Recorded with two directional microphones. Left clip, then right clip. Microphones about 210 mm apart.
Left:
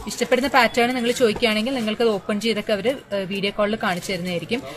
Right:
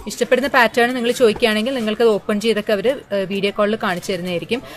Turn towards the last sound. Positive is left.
turn(degrees=-50)  # may be behind; listen again after turning